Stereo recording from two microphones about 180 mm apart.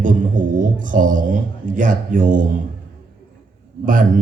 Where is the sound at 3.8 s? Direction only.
50° right (ahead or behind).